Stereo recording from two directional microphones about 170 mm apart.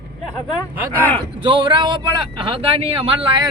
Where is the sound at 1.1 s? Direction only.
30° right (ahead or behind).